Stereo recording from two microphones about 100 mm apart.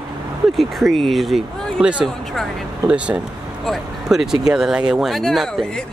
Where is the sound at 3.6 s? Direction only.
5° right (ahead or behind).